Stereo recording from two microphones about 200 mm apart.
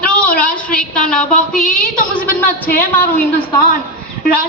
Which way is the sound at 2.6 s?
45° left (ahead or behind).